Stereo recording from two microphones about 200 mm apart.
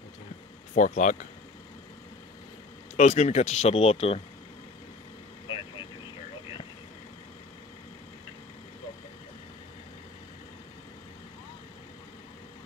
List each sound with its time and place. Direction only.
0.7 s speech: 40° left (ahead or behind)
3.0 s speech: 35° left (ahead or behind)